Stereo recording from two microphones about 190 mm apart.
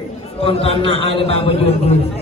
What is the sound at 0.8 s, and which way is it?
Speech, 65° right (ahead or behind).